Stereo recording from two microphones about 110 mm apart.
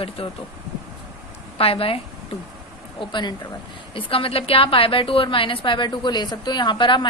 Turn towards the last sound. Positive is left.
turn(degrees=45)  # may be behind; listen again after turning